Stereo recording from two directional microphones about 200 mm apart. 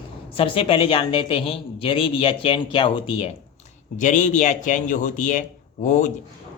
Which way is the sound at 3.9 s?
40° left (ahead or behind).